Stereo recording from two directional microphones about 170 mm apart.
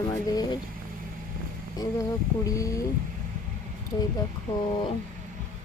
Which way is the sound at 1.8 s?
20° left (ahead or behind).